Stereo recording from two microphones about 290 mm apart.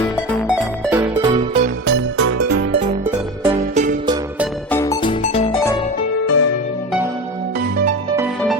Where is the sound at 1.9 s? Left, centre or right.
Right.